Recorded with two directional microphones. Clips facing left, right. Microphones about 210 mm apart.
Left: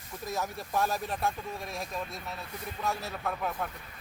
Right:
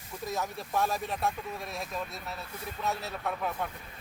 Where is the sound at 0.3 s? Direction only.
Centre (ahead or behind).